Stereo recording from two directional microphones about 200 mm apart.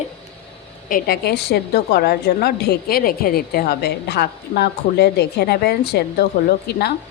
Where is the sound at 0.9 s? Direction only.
50° left (ahead or behind).